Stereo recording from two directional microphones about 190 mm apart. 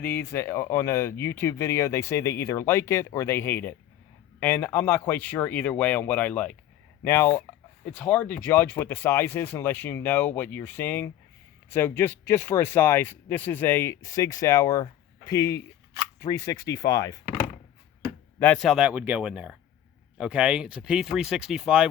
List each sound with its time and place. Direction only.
0.0 s speech: 10° left (ahead or behind)
18.3 s speech: 5° left (ahead or behind)